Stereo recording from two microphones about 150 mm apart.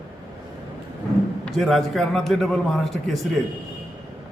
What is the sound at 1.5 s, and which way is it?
A man's voice, centre (ahead or behind).